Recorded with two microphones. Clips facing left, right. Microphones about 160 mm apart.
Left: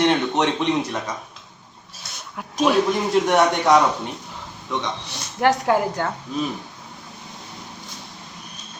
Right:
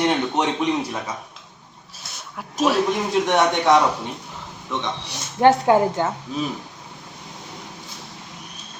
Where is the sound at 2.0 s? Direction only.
5° right (ahead or behind).